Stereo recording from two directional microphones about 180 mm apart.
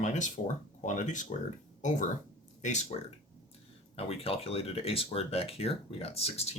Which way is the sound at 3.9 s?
30° left (ahead or behind).